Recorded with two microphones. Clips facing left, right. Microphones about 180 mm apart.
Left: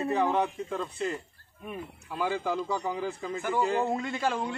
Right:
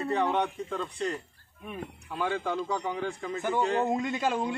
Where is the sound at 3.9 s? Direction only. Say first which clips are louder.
Right 1 dB; 15° right (ahead or behind).